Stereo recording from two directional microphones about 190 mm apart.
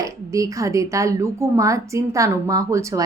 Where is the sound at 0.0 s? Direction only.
15° right (ahead or behind).